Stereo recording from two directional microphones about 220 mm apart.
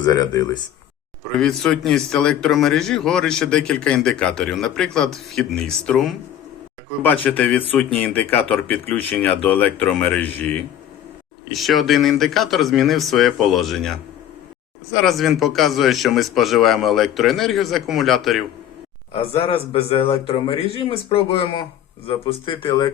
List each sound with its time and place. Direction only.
0.0 s speech: 15° left (ahead or behind)
1.4 s a man's voice: centre (ahead or behind)
15.0 s a man's voice: centre (ahead or behind)
19.1 s speech: 25° left (ahead or behind)